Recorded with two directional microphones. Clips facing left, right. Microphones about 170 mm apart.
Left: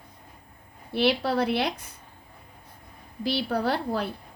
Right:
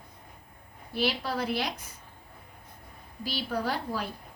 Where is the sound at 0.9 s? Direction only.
65° left (ahead or behind).